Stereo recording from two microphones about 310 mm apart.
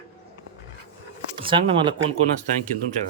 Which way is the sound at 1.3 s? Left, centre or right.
Centre.